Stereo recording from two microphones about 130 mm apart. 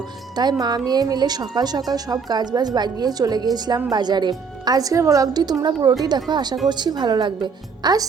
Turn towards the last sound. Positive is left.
turn(degrees=-35)  # may be behind; listen again after turning